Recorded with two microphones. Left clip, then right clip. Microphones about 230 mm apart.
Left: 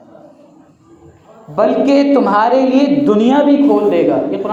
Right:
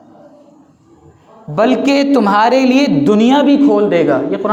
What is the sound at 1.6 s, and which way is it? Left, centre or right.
A woman's voice, right.